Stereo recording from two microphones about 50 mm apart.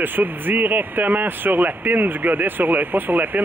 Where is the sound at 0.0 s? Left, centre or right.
Right.